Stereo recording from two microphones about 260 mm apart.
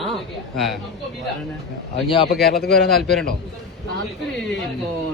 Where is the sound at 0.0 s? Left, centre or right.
Centre.